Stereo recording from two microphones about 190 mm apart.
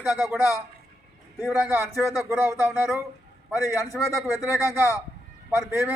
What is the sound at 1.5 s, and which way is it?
A man's voice, 10° right (ahead or behind).